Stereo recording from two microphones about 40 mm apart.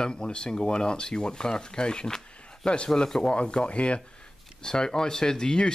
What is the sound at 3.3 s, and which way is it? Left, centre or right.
Speech, left.